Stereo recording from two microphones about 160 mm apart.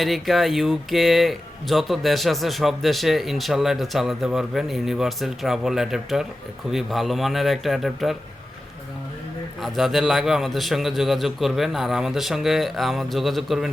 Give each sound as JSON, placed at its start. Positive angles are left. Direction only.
{"t": 0.0, "sound": "speech", "side_deg": 0}
{"t": 9.6, "sound": "speech", "side_deg": 0}